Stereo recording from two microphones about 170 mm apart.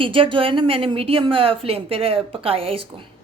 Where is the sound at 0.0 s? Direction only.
30° right (ahead or behind).